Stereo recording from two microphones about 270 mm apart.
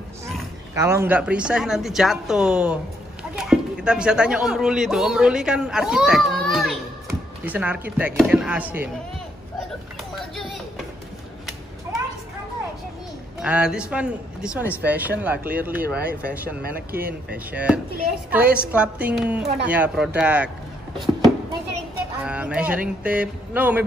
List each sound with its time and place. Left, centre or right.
0.7 s a woman's voice: centre
10.1 s a sound: centre
11.9 s a sound: centre
13.4 s a woman's voice: centre
16.6 s speech: right
17.3 s a woman's voice: centre
22.2 s a woman's voice: centre